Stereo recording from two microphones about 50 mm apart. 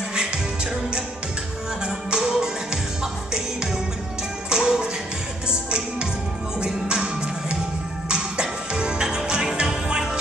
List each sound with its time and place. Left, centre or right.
0.1 s music: centre
4.5 s music: centre